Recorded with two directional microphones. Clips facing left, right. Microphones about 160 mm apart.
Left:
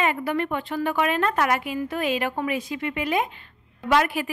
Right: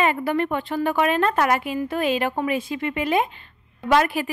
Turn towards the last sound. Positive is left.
turn(degrees=-35)  # may be behind; listen again after turning